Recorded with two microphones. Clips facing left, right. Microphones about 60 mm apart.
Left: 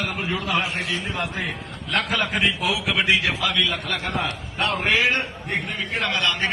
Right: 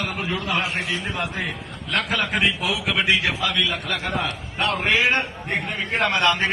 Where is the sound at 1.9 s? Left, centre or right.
Centre.